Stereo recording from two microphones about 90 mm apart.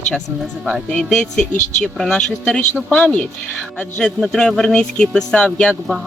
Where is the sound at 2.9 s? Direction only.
15° left (ahead or behind).